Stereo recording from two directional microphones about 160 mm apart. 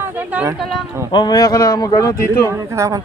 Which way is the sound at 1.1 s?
25° left (ahead or behind).